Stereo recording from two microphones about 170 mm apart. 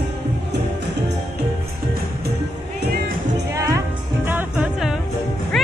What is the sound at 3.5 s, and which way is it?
Music, 20° right (ahead or behind).